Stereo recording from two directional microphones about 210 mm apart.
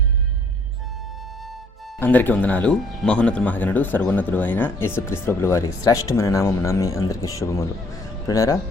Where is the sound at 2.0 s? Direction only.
10° left (ahead or behind).